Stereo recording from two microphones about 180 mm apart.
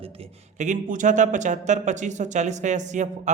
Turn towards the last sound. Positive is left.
turn(degrees=-40)  # may be behind; listen again after turning